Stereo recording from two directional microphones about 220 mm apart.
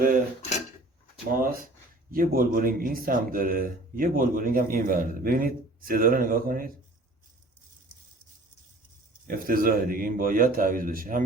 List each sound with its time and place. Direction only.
1.3 s a man's voice: 40° right (ahead or behind)
9.2 s a man's voice: 40° right (ahead or behind)